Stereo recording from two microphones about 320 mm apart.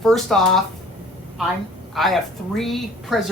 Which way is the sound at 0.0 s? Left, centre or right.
Centre.